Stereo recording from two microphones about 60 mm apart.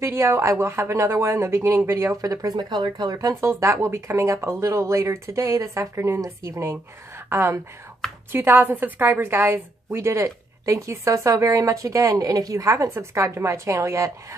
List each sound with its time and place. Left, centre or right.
0.0 s a woman's voice: right
6.0 s a woman's voice: right